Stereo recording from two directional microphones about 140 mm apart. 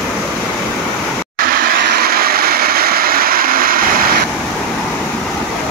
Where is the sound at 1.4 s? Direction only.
90° right.